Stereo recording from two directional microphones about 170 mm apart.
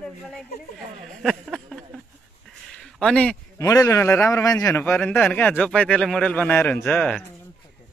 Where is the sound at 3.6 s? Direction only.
20° left (ahead or behind).